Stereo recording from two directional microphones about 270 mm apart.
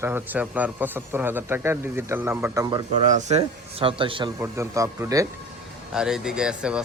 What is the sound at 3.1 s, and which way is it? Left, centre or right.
Speech, right.